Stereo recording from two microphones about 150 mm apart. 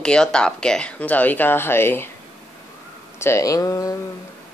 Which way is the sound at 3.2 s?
20° left (ahead or behind).